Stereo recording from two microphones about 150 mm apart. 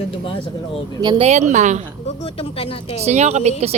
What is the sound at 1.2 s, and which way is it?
Speech, 50° right (ahead or behind).